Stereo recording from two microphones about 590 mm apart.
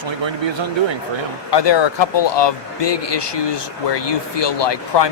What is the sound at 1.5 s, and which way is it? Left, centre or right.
Speech, left.